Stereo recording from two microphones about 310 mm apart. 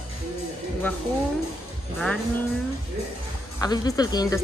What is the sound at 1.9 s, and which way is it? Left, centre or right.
Speech, centre.